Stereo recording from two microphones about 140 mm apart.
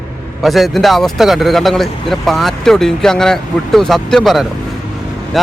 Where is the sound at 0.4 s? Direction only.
Centre (ahead or behind).